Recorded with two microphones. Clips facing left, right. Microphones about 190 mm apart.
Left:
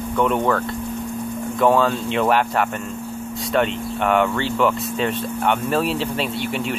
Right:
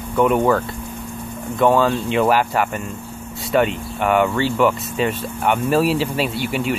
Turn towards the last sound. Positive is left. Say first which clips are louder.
# right 2 dB
turn(degrees=-5)  # may be behind; listen again after turning